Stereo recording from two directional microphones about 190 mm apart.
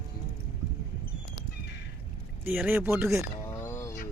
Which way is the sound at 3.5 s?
10° left (ahead or behind).